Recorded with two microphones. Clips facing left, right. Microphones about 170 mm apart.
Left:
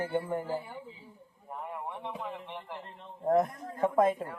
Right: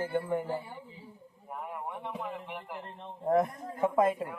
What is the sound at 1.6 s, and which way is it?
Speech, 10° right (ahead or behind).